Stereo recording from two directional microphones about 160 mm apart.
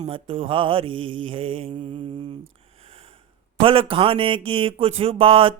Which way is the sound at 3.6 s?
35° right (ahead or behind).